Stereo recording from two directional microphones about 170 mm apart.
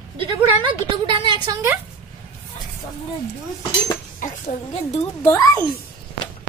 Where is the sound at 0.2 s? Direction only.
25° right (ahead or behind).